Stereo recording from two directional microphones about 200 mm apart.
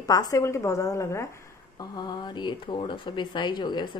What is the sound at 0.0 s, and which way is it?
A woman's voice, 20° left (ahead or behind).